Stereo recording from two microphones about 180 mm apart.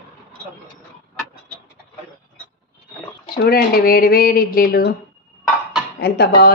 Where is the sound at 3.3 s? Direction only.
55° left (ahead or behind).